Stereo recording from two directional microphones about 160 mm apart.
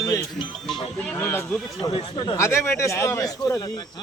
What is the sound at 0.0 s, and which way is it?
Music, 20° left (ahead or behind).